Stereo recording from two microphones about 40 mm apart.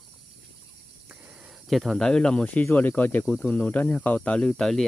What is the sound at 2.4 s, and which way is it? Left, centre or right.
Speech, left.